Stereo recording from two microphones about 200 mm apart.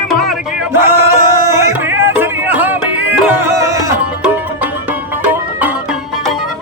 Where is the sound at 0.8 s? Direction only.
15° right (ahead or behind).